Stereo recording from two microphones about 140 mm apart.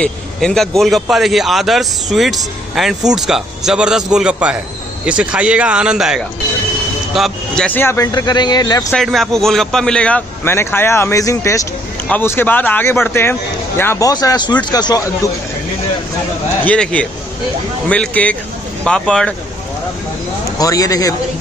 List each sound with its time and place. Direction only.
0.0 s a man's voice: 5° left (ahead or behind)
8.1 s speech: 30° left (ahead or behind)
8.9 s speech: centre (ahead or behind); by 15.0 s 30° left (ahead or behind)
16.6 s a man's voice: 10° left (ahead or behind)
20.5 s speech: 25° left (ahead or behind)